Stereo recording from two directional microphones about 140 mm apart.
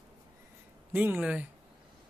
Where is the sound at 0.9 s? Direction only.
15° right (ahead or behind).